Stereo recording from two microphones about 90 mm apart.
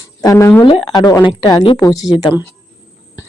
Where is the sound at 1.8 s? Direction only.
40° left (ahead or behind).